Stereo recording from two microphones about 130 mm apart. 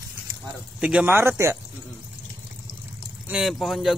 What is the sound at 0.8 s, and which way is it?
Speech, 10° right (ahead or behind).